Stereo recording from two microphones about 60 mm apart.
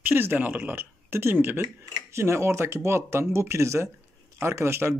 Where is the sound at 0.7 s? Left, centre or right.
Right.